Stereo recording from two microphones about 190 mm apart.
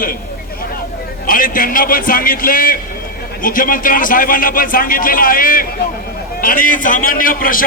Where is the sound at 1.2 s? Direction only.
50° left (ahead or behind).